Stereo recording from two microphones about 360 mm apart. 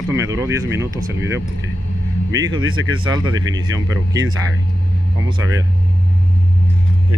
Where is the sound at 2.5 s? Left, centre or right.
Right.